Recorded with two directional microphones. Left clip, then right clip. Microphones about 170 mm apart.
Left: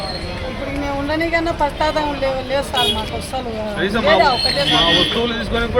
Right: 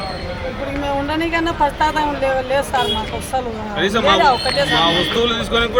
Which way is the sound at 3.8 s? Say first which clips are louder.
Right 3 dB; 30° right (ahead or behind).